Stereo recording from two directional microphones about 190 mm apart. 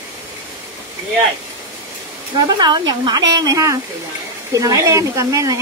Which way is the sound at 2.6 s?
20° right (ahead or behind).